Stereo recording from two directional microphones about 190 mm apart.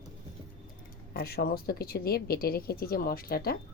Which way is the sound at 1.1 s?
55° left (ahead or behind).